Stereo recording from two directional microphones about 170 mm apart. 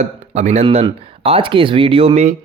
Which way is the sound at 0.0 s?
40° right (ahead or behind).